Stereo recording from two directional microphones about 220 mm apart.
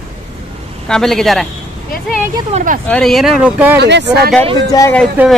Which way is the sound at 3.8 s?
50° right (ahead or behind).